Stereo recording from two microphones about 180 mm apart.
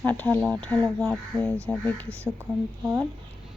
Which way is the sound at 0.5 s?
10° left (ahead or behind).